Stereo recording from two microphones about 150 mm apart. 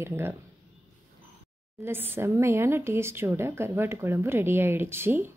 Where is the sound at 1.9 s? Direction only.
15° right (ahead or behind).